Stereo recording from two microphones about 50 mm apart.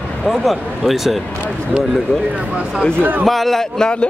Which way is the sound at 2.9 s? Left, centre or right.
Right.